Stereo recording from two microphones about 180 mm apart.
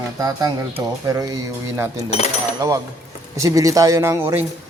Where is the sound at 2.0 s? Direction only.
35° left (ahead or behind).